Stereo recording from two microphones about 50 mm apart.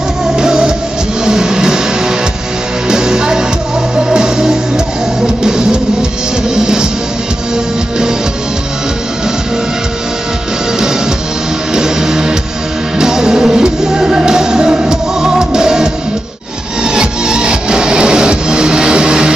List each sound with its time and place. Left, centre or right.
0.4 s music: centre
11.7 s music: centre